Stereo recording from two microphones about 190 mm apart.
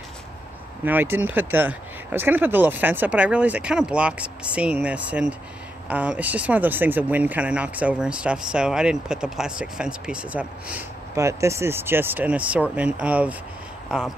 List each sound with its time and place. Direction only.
0.8 s speech: 10° right (ahead or behind)
11.1 s speech: 15° right (ahead or behind)